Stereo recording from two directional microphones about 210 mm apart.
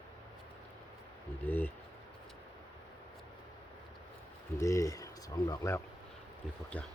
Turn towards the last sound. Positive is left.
turn(degrees=5)  # may be behind; listen again after turning